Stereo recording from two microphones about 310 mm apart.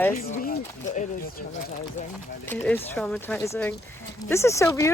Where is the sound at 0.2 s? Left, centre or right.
Left.